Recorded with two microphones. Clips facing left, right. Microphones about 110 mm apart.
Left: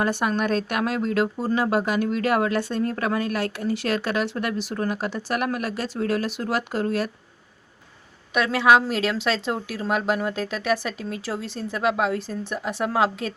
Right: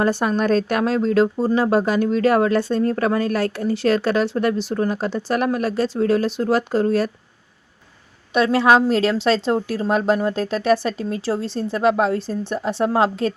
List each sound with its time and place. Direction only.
0.0 s speech: 30° right (ahead or behind)
8.5 s speech: 35° right (ahead or behind)